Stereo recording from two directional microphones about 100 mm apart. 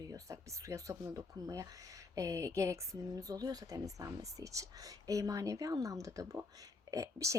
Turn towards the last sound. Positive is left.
turn(degrees=-30)  # may be behind; listen again after turning